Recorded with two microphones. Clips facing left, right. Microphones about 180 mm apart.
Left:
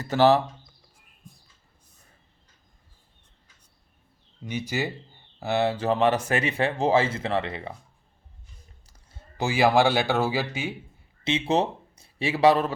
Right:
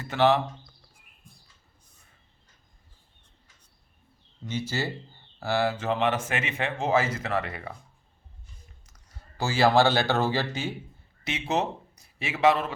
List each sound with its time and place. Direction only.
0.0 s speech: 40° left (ahead or behind)
4.4 s speech: 15° left (ahead or behind)
5.7 s speech: 35° left (ahead or behind)
8.9 s speech: 25° left (ahead or behind); by 10.8 s 10° left (ahead or behind)
11.2 s speech: 25° left (ahead or behind)